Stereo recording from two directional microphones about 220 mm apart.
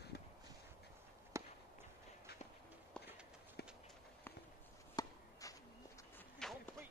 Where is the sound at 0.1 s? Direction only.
45° left (ahead or behind).